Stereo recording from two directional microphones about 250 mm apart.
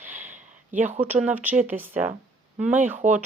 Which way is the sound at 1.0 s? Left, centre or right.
Centre.